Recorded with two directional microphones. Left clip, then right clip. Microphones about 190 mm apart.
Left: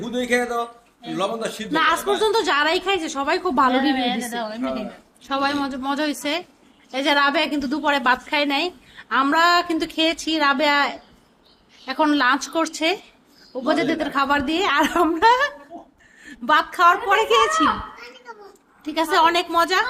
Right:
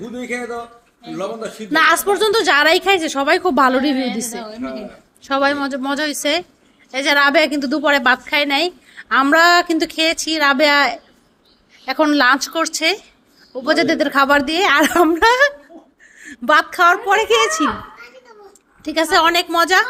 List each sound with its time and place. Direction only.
1.1 s a man's voice: 50° left (ahead or behind)
1.7 s a woman's voice: 30° right (ahead or behind)
4.4 s a woman's voice: 25° left (ahead or behind)
5.2 s a woman's voice: 25° right (ahead or behind)
18.8 s a woman's voice: 25° right (ahead or behind)